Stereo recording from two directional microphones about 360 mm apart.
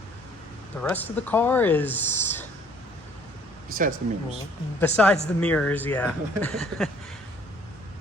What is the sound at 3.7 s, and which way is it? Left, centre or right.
Speech, right.